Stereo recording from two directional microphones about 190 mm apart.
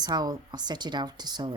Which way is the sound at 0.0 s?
20° right (ahead or behind).